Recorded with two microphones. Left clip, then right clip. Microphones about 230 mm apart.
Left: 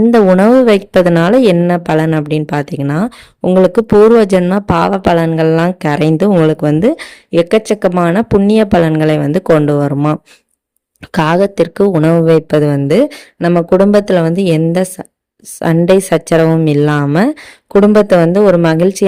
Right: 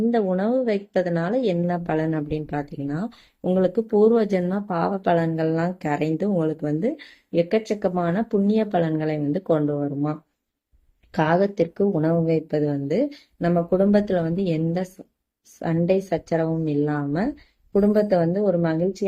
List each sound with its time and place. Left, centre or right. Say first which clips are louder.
0.1 s a woman's voice: left 15 dB; left